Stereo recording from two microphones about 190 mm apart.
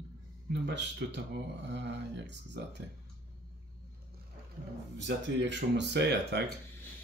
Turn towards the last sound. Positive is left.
turn(degrees=-65)  # may be behind; listen again after turning